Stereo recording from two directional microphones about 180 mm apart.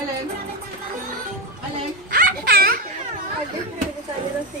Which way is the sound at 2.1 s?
55° right (ahead or behind).